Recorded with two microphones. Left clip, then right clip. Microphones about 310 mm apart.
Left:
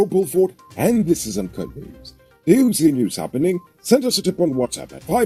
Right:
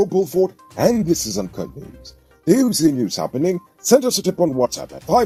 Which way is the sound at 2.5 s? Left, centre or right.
Right.